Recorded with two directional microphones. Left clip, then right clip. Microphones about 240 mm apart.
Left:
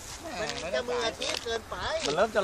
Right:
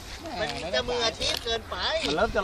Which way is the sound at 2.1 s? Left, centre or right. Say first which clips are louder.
Left 2 dB; left.